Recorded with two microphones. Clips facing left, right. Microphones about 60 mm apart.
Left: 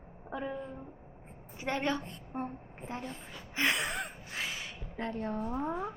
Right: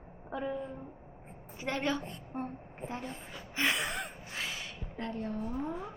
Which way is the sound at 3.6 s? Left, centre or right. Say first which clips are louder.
Left 1 dB; centre.